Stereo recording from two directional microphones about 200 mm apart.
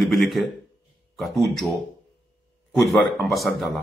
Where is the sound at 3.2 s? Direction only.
Centre (ahead or behind).